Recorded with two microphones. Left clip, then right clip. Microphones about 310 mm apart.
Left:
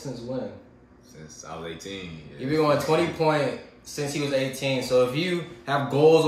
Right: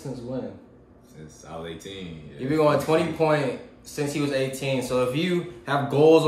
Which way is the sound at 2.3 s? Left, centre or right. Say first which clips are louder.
Right 1 dB; centre.